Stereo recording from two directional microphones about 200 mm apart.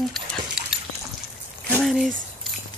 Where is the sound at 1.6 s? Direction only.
10° left (ahead or behind).